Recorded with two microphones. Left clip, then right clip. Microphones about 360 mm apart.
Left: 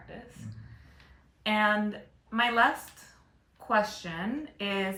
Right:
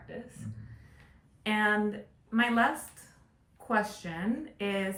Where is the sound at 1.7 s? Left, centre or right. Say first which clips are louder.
Even; centre.